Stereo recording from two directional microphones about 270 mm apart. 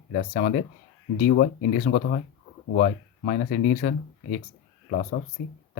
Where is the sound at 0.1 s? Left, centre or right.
Left.